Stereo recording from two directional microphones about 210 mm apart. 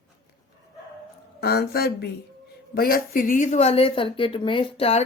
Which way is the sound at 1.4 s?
50° left (ahead or behind).